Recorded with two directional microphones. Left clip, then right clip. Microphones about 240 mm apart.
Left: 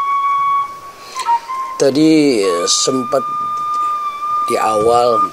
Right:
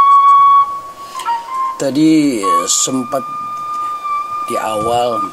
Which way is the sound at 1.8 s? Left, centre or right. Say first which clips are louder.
Left 2 dB; centre.